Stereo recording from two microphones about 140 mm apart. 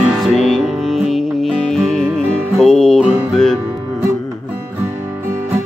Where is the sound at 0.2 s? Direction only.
Centre (ahead or behind).